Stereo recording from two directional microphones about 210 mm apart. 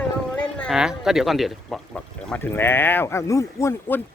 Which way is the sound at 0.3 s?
Centre (ahead or behind).